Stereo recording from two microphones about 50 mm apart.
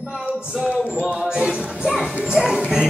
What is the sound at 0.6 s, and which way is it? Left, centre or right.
Music, right.